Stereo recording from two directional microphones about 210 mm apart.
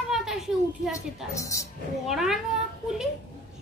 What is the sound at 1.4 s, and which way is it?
Speech, 15° left (ahead or behind).